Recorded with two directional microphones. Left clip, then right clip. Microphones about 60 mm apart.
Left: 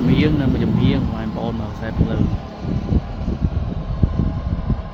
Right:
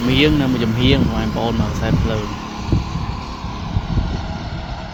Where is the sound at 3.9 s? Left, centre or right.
Left.